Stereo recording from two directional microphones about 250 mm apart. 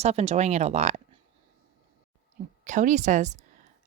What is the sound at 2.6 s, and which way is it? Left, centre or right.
Speech, right.